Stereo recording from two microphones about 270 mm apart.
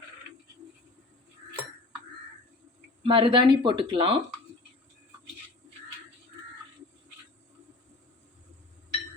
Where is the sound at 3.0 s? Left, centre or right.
Centre.